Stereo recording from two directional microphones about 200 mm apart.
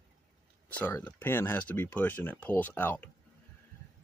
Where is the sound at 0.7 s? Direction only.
10° left (ahead or behind).